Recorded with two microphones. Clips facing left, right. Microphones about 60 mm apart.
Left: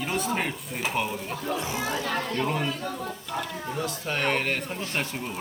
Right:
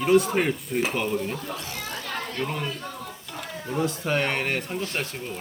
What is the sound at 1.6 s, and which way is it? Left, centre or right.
Speech, centre.